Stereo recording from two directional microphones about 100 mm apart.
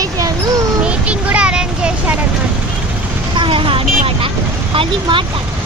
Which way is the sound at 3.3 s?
60° right (ahead or behind).